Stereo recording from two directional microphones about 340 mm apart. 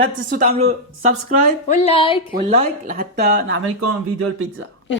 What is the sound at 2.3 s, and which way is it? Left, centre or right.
Speech, centre.